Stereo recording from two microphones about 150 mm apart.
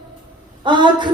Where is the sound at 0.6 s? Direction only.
30° right (ahead or behind).